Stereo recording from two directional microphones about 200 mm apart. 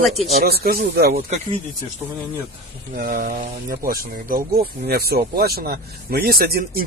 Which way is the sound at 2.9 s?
45° right (ahead or behind).